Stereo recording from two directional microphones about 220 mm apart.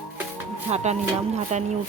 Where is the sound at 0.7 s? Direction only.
30° right (ahead or behind).